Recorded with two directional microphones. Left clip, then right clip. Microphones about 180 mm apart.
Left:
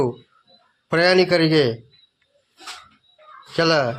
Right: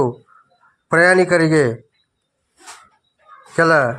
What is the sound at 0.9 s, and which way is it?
Speech, 15° right (ahead or behind).